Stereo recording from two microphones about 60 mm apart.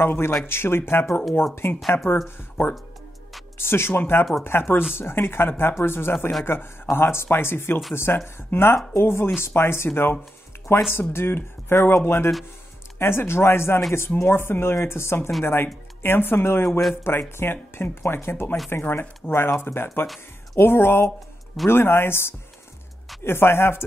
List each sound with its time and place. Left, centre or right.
0.0 s speech: left
1.8 s speech: centre
2.2 s speech: left
11.0 s speech: left